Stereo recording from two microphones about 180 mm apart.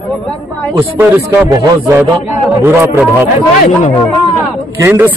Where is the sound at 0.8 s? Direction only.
10° right (ahead or behind).